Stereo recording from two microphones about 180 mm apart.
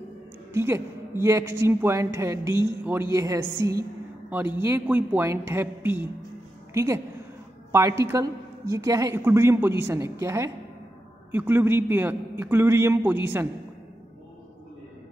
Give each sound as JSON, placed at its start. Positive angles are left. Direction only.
{"t": 0.6, "sound": "a woman's voice", "side_deg": -15}